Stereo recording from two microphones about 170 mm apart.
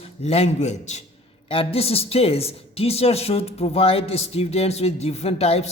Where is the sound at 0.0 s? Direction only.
35° left (ahead or behind).